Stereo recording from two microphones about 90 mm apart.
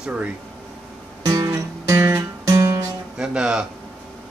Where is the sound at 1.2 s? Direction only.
45° right (ahead or behind).